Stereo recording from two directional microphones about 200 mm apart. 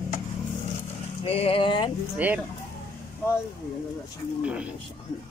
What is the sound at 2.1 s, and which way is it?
Speech, 10° right (ahead or behind).